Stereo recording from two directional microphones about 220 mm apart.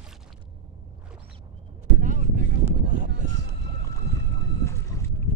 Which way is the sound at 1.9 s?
35° right (ahead or behind).